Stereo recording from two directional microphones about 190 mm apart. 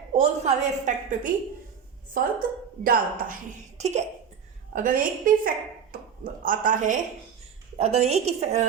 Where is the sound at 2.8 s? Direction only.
50° right (ahead or behind).